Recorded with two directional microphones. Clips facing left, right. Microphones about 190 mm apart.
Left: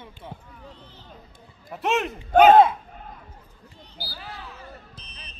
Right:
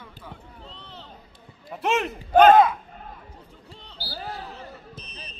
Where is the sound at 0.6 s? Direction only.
70° right (ahead or behind).